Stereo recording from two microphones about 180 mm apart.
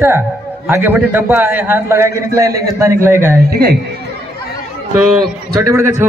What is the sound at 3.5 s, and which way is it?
Speech, 60° right (ahead or behind).